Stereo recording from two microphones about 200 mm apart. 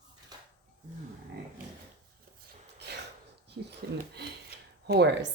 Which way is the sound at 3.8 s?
55° right (ahead or behind).